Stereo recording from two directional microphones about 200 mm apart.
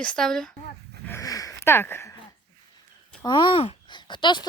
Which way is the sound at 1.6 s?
10° left (ahead or behind).